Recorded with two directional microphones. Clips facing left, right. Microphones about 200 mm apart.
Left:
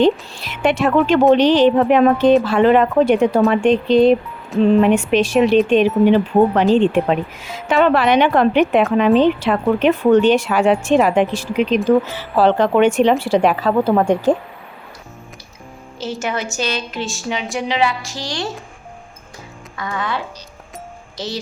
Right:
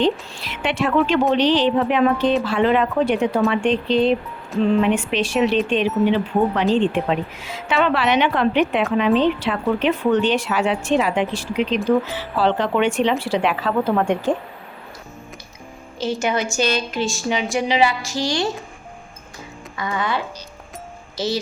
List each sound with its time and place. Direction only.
0.0 s speech: 45° left (ahead or behind)
16.0 s a woman's voice: 5° left (ahead or behind)
19.7 s a woman's voice: centre (ahead or behind)